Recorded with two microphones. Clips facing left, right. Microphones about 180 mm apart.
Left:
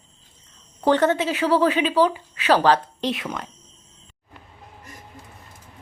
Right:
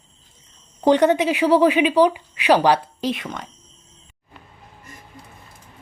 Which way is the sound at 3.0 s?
Centre (ahead or behind).